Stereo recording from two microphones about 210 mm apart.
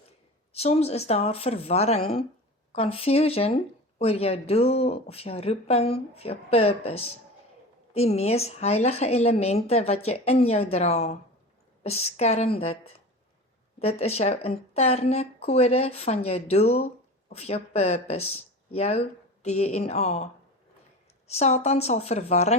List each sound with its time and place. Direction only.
0.5 s speech: 30° left (ahead or behind)
13.7 s speech: 30° left (ahead or behind)
21.2 s speech: 30° left (ahead or behind)